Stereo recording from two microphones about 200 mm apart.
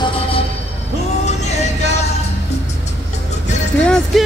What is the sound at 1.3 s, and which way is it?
Music, 35° left (ahead or behind).